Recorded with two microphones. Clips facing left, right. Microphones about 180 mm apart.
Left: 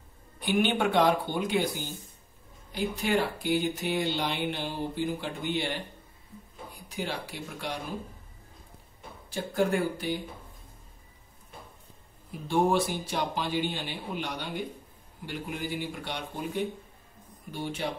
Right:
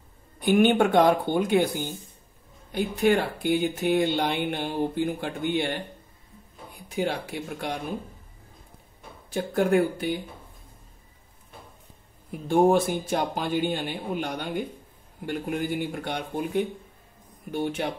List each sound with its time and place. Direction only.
0.4 s speech: 50° right (ahead or behind)
2.7 s speech: 55° right (ahead or behind)
7.0 s speech: 55° right (ahead or behind)
9.3 s speech: 55° right (ahead or behind)
12.3 s speech: 50° right (ahead or behind)